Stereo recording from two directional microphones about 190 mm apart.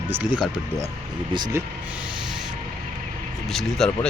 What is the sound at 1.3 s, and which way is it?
Speech, 20° right (ahead or behind).